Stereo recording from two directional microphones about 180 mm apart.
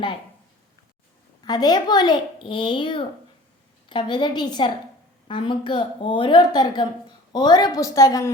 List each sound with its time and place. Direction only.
1.5 s a child's voice: 20° left (ahead or behind)